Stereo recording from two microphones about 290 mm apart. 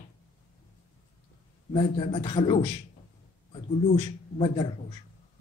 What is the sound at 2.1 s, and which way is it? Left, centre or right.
A man's voice, centre.